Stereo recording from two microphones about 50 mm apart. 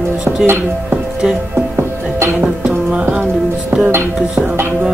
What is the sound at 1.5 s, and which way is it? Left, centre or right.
Music, right.